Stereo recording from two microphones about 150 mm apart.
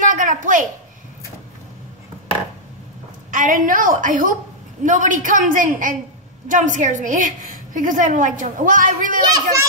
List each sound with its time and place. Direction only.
0.0 s a sound: 60° right (ahead or behind)
3.3 s a woman's voice: 65° right (ahead or behind)
9.3 s a child's voice: 20° right (ahead or behind)